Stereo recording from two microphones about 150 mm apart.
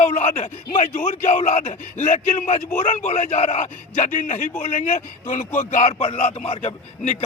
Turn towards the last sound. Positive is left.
turn(degrees=50)  # may be behind; listen again after turning